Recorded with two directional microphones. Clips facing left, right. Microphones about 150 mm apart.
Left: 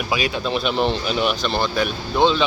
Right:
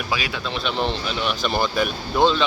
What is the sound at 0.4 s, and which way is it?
Speech, 10° left (ahead or behind).